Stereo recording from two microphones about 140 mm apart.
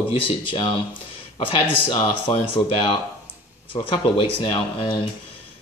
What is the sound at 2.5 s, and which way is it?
Speech, 35° left (ahead or behind).